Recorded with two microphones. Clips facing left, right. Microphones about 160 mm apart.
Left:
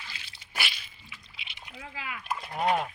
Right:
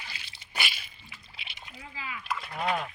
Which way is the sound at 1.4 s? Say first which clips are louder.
Right 1 dB; 40° right (ahead or behind).